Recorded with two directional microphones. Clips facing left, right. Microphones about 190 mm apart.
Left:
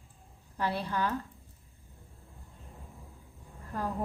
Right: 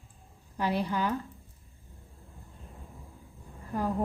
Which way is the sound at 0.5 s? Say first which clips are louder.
Right 3 dB; 15° right (ahead or behind).